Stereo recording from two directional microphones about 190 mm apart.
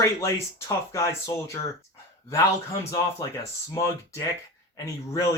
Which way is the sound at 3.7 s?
15° left (ahead or behind).